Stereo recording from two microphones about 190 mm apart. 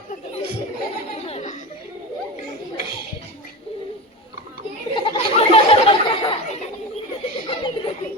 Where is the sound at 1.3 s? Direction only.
35° left (ahead or behind).